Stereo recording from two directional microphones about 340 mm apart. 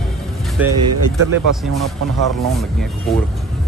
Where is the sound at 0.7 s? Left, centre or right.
Right.